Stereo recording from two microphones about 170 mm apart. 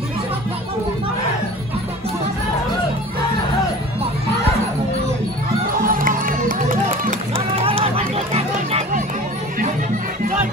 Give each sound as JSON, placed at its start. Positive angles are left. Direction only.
{"t": 5.9, "sound": "music", "side_deg": -55}
{"t": 7.6, "sound": "a sound", "side_deg": -35}
{"t": 8.3, "sound": "music", "side_deg": -35}